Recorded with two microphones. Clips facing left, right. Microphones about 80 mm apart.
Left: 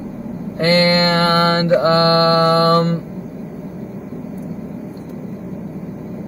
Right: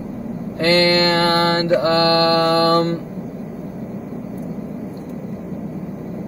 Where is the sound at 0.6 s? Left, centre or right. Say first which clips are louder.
Left 1 dB; left.